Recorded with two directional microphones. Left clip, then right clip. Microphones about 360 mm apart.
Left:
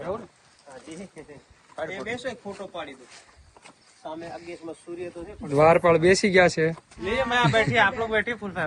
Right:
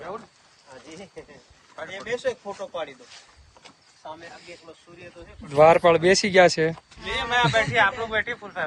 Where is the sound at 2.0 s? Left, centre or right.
Right.